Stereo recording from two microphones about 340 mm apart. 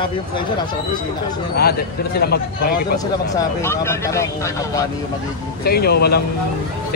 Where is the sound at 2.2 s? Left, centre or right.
Left.